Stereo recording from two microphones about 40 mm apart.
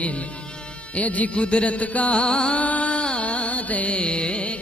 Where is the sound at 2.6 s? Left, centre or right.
Left.